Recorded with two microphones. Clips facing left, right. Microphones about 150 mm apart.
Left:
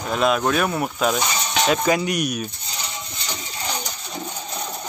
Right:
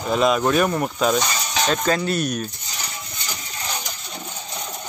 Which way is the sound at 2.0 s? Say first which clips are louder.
Right 1 dB; 15° left (ahead or behind).